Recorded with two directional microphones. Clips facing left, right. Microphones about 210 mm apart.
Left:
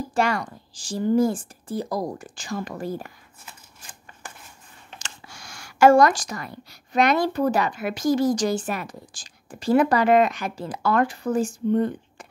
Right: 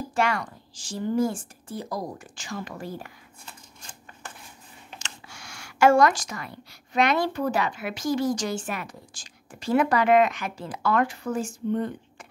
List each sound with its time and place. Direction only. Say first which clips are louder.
0.1 s a woman's voice: left 2 dB; 35° left (ahead or behind)
3.4 s a sound: even; 5° left (ahead or behind)
5.0 s speech: left 1 dB; 40° left (ahead or behind)